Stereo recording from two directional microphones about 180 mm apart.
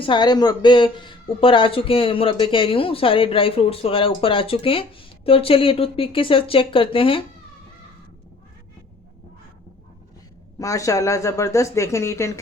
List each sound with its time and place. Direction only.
0.0 s speech: 25° left (ahead or behind)
10.6 s speech: 20° left (ahead or behind)